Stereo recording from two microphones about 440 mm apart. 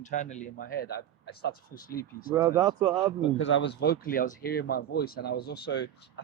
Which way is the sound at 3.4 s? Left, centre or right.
Left.